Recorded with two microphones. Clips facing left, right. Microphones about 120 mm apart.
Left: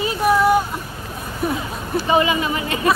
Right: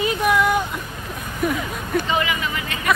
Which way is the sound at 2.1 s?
25° left (ahead or behind).